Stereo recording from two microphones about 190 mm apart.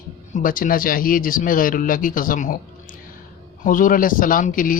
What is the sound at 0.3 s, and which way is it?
Speech, 45° left (ahead or behind).